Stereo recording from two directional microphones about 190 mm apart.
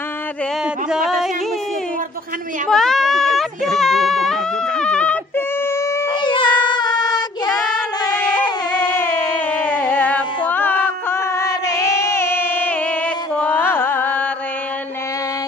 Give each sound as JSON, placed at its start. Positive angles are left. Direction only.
{"t": 0.8, "sound": "music", "side_deg": -5}
{"t": 2.7, "sound": "a sound", "side_deg": 0}
{"t": 6.2, "sound": "child singing", "side_deg": 25}
{"t": 8.5, "sound": "music", "side_deg": 20}